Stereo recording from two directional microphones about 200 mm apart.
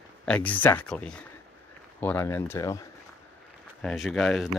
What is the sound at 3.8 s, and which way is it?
Speech, centre (ahead or behind).